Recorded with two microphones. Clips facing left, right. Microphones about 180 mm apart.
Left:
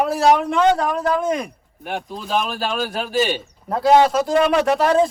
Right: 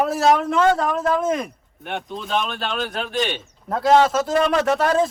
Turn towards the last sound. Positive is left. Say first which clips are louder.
# left 2 dB
turn(degrees=5)  # may be behind; listen again after turning